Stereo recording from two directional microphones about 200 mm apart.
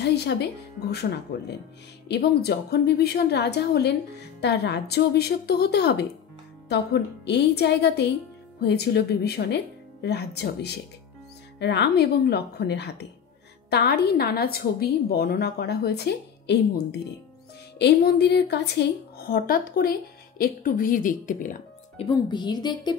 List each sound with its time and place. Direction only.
0.0 s a woman's voice: 55° left (ahead or behind); by 22.0 s 40° left (ahead or behind)
22.0 s a woman's voice: 20° left (ahead or behind)